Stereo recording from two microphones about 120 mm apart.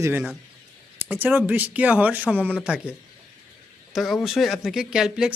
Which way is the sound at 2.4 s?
10° left (ahead or behind).